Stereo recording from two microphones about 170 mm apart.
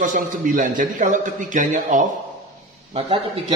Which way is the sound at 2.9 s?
40° right (ahead or behind).